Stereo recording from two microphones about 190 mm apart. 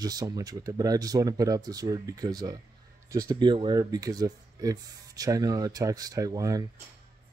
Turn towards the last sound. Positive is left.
turn(degrees=-20)  # may be behind; listen again after turning